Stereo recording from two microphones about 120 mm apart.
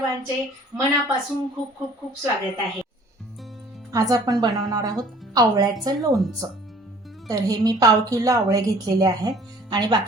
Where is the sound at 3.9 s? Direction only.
30° right (ahead or behind).